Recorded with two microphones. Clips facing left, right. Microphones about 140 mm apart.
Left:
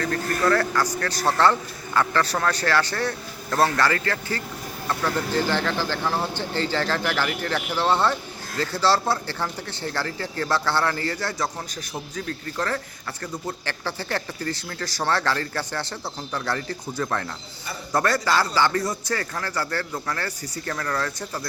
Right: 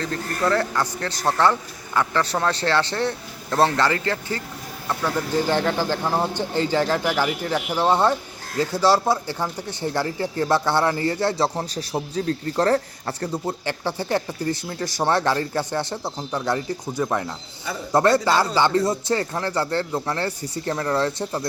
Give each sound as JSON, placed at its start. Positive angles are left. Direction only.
{"t": 0.0, "sound": "a man's voice", "side_deg": -20}
{"t": 13.7, "sound": "speech", "side_deg": -20}